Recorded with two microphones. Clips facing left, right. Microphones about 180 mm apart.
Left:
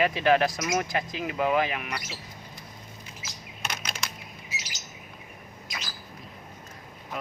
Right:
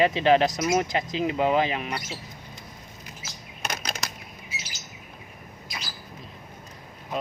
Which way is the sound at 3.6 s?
40° right (ahead or behind).